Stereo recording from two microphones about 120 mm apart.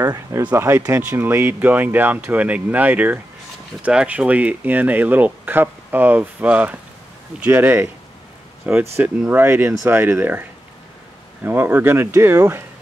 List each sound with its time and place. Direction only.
0.0 s a sound: 30° right (ahead or behind)
0.4 s speech: 15° right (ahead or behind)
11.4 s speech: 15° right (ahead or behind)